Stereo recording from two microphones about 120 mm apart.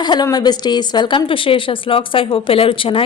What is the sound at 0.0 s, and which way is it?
A woman's voice, 40° left (ahead or behind).